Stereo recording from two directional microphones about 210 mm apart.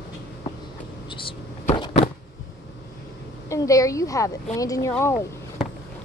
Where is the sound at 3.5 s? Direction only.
15° left (ahead or behind).